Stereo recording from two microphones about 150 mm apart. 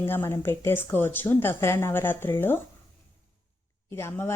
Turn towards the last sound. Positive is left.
turn(degrees=15)  # may be behind; listen again after turning